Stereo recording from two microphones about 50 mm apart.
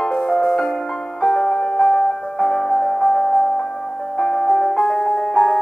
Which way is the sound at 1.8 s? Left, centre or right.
Left.